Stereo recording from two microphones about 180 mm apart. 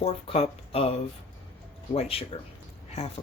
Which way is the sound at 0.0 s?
35° left (ahead or behind).